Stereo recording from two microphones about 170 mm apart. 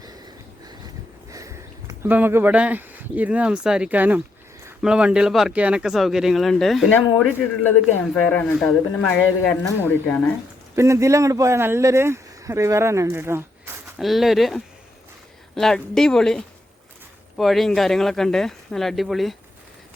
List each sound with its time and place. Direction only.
1.3 s a sound: 20° right (ahead or behind)
2.0 s speech: 10° right (ahead or behind); by 10.2 s 10° left (ahead or behind)
10.8 s speech: 15° right (ahead or behind)
14.0 s speech: centre (ahead or behind)